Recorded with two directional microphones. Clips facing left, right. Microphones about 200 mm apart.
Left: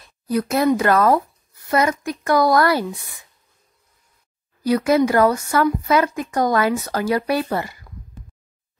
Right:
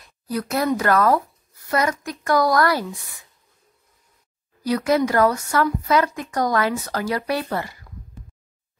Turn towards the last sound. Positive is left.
turn(degrees=25)  # may be behind; listen again after turning